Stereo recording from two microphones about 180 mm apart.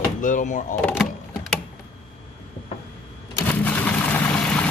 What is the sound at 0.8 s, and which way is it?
Speech, 5° left (ahead or behind).